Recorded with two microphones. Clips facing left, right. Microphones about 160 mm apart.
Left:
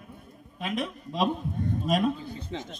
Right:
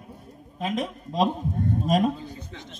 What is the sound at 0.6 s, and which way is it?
A man's voice, 40° right (ahead or behind).